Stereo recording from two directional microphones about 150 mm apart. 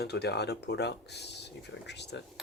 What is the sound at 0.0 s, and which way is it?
Speech, 90° left.